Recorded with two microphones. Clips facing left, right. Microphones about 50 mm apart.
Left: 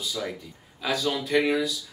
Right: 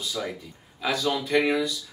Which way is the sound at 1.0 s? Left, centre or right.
Centre.